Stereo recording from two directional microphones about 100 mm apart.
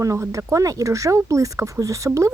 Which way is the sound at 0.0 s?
30° right (ahead or behind).